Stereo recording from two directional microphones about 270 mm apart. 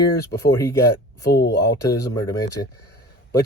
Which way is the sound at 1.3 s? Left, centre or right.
Left.